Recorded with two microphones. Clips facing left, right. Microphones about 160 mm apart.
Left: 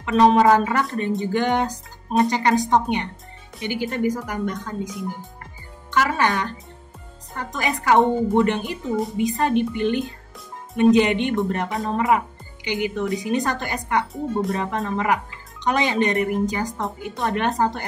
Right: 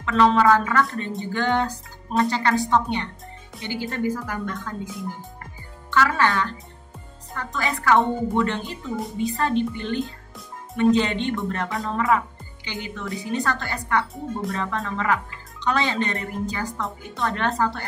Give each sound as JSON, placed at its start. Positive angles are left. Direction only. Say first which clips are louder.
{"t": 0.0, "sound": "speech", "louder": "left 3 dB", "side_deg": 20}